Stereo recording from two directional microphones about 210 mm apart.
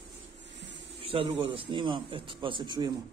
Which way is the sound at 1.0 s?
25° right (ahead or behind).